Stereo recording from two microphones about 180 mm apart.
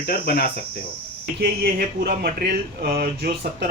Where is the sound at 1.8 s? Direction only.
55° right (ahead or behind).